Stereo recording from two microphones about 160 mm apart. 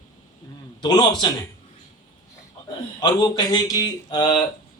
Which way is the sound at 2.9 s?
25° left (ahead or behind).